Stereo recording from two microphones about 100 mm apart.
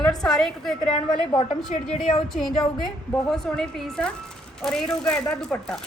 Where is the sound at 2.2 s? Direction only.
Centre (ahead or behind).